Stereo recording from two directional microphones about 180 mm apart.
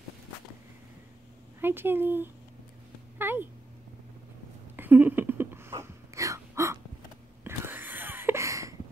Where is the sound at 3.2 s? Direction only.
10° right (ahead or behind).